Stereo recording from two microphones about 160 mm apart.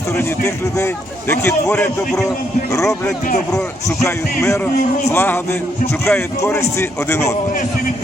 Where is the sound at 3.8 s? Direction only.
20° left (ahead or behind).